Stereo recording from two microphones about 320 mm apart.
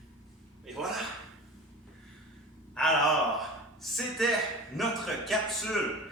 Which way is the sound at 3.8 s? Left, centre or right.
Centre.